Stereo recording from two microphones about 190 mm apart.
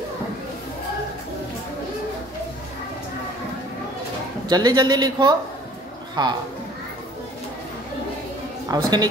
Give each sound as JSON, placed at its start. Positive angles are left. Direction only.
{"t": 4.5, "sound": "speech", "side_deg": -20}
{"t": 8.6, "sound": "speech", "side_deg": -20}